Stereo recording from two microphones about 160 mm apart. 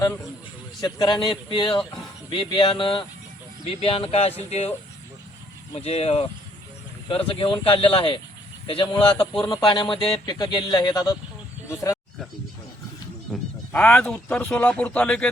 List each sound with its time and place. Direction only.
0.8 s speech: 25° left (ahead or behind); by 4.7 s 40° left (ahead or behind)
5.7 s speech: 40° left (ahead or behind); by 11.9 s 20° left (ahead or behind)
13.3 s speech: 10° left (ahead or behind)